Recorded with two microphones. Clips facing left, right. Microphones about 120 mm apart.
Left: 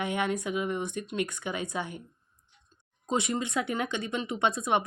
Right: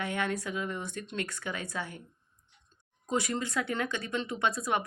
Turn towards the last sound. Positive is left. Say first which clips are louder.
# left 3 dB
turn(degrees=20)  # may be behind; listen again after turning